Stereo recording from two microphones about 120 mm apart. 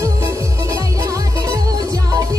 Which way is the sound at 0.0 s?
25° right (ahead or behind).